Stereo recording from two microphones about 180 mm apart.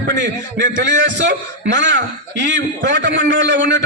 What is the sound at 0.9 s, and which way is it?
A man's voice, 80° right.